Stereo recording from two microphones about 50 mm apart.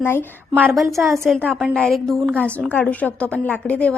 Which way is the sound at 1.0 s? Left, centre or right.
Right.